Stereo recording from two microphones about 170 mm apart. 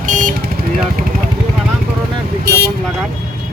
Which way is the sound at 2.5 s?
65° right (ahead or behind).